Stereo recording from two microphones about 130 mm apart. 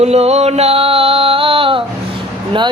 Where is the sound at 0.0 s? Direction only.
55° right (ahead or behind).